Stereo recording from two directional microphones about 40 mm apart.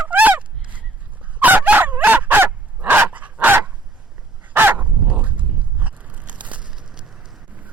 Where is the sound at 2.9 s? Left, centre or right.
Right.